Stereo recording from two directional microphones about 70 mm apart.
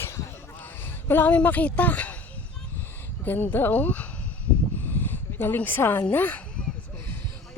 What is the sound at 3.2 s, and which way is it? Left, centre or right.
Speech, left.